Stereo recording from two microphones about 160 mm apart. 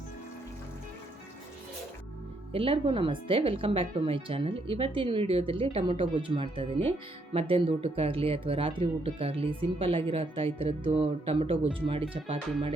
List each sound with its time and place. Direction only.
2.5 s speech: 35° right (ahead or behind)